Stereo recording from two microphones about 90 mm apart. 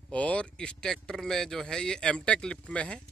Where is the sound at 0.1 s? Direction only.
15° left (ahead or behind).